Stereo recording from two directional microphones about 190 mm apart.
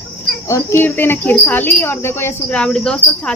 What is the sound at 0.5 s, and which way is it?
Speech, 15° left (ahead or behind).